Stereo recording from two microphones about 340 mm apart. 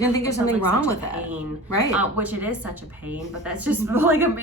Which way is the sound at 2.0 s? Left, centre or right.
Centre.